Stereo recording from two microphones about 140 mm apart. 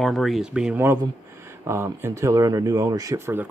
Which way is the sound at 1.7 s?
20° right (ahead or behind).